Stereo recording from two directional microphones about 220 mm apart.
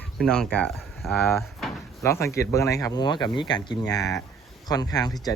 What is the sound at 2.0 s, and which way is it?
Speech, 15° left (ahead or behind).